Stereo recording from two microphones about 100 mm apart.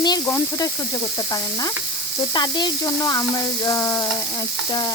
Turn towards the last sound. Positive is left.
turn(degrees=30)  # may be behind; listen again after turning